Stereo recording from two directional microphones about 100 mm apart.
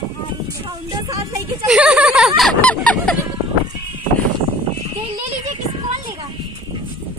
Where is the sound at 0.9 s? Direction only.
35° right (ahead or behind).